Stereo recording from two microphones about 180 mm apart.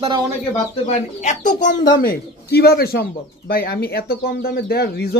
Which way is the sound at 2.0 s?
60° left (ahead or behind).